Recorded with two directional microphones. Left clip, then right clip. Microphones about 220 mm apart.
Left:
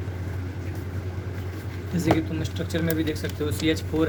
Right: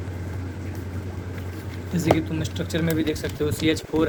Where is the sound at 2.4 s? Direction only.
25° right (ahead or behind).